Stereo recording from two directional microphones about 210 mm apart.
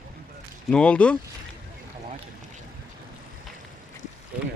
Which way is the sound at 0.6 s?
5° left (ahead or behind).